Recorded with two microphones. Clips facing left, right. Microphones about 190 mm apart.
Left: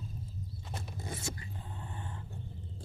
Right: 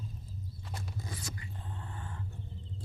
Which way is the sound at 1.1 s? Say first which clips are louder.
Left 3 dB; 25° left (ahead or behind).